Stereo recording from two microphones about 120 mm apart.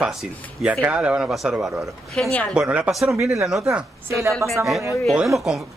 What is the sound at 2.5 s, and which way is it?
Speech, 10° right (ahead or behind).